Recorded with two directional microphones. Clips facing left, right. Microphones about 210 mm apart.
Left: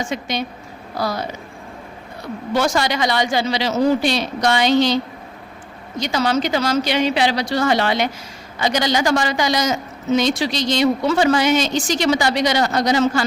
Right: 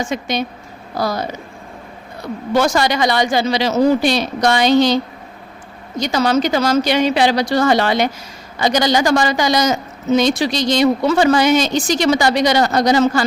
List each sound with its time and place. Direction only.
0.1 s a man's voice: 45° right (ahead or behind)
2.6 s speech: 45° right (ahead or behind)
6.0 s a man's voice: 45° right (ahead or behind)